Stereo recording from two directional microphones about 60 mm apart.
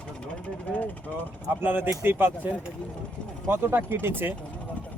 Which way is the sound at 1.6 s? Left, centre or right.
Right.